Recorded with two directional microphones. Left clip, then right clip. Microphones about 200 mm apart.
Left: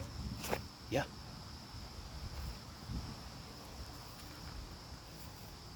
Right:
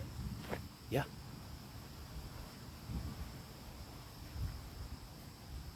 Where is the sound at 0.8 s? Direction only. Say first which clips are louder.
Left 2 dB; 10° right (ahead or behind).